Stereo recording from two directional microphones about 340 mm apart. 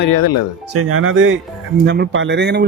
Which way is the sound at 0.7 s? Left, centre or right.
Right.